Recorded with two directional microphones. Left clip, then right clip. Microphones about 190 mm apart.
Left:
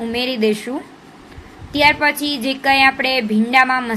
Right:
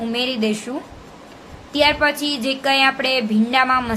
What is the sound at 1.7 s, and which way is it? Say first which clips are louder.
A woman's voice: left 2 dB; 5° left (ahead or behind).